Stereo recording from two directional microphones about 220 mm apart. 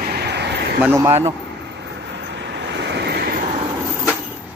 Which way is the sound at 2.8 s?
50° right (ahead or behind).